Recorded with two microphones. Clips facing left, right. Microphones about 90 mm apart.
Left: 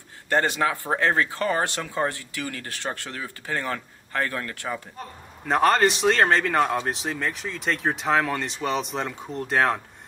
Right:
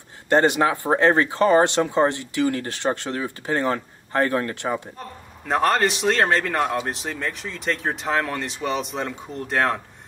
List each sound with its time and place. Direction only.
0.3 s speech: 20° right (ahead or behind)
5.5 s speech: centre (ahead or behind)